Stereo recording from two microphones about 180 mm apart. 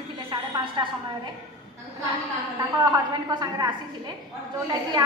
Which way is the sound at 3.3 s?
20° right (ahead or behind).